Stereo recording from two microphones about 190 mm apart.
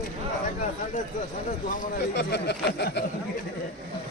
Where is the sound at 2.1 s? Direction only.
60° left (ahead or behind).